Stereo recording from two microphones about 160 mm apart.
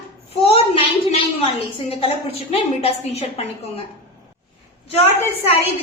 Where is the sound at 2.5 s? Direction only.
40° left (ahead or behind).